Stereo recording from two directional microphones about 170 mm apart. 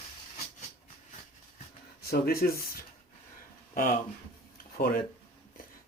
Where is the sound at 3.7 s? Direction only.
55° left (ahead or behind).